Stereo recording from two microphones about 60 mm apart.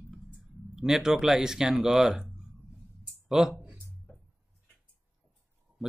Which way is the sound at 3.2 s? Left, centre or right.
Centre.